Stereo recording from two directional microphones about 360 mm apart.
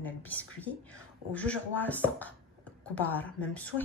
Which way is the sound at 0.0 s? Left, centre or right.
Centre.